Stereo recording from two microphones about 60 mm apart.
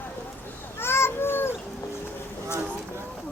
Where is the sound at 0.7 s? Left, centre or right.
Left.